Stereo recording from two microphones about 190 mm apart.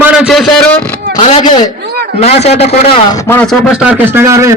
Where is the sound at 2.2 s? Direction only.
35° left (ahead or behind).